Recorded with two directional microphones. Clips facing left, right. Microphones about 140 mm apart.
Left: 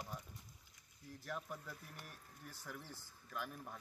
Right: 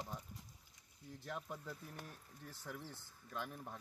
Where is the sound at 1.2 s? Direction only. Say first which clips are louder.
Even; 25° right (ahead or behind).